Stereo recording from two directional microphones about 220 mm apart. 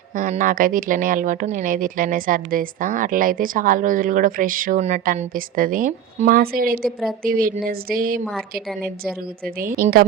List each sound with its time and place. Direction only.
0.2 s speech: 35° right (ahead or behind)
9.6 s speech: 40° right (ahead or behind)